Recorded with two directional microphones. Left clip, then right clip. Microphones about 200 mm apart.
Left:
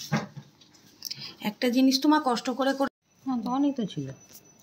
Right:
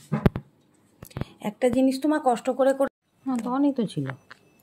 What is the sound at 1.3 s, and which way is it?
Speech, 40° right (ahead or behind).